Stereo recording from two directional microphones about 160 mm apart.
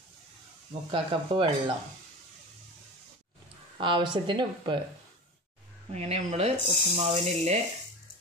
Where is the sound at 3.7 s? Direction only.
30° right (ahead or behind).